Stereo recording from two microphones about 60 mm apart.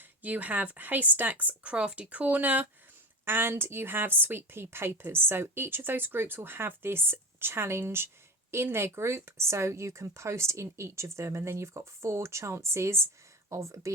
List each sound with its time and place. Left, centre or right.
0.0 s speech: right
3.2 s a woman's voice: right